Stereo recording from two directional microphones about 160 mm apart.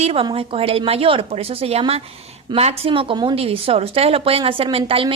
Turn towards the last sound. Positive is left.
turn(degrees=-35)  # may be behind; listen again after turning